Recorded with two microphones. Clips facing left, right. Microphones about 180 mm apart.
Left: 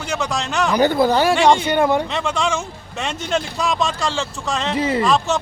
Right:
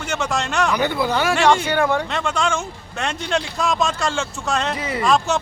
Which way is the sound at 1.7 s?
15° left (ahead or behind).